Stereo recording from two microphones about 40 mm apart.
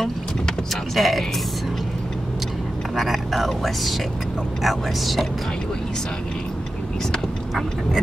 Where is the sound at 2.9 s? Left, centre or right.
Centre.